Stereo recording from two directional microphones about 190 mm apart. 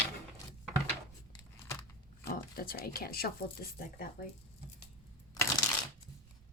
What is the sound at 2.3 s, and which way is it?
A woman's voice, 50° left (ahead or behind).